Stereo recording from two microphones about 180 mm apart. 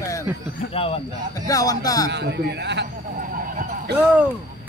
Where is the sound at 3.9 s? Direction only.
65° right (ahead or behind).